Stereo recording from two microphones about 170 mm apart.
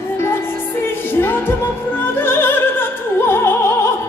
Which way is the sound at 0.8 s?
15° left (ahead or behind).